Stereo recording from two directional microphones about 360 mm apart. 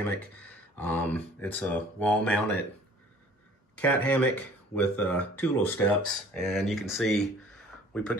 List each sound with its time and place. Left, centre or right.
0.4 s speech: centre
3.7 s a man's voice: centre